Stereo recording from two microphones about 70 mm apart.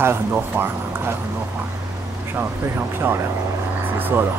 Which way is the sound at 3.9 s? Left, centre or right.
Right.